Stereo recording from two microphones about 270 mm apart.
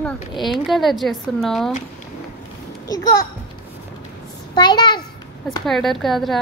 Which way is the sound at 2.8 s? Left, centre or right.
Centre.